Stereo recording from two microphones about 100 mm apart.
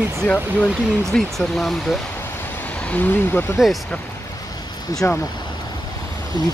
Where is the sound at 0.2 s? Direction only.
15° left (ahead or behind).